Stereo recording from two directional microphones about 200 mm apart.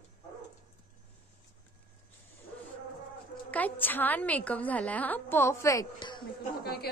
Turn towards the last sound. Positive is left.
turn(degrees=50)  # may be behind; listen again after turning